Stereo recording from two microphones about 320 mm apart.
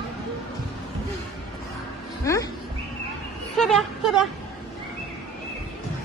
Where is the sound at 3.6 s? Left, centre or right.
Centre.